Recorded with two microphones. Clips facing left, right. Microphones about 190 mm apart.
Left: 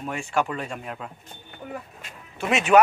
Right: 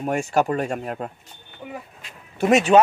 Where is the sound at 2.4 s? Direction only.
40° right (ahead or behind).